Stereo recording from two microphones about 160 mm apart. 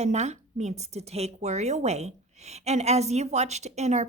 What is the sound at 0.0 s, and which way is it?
Speech, 45° right (ahead or behind).